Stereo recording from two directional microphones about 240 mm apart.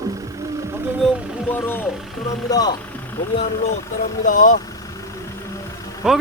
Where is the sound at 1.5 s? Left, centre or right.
Centre.